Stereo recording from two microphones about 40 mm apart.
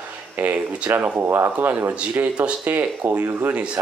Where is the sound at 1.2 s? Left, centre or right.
Right.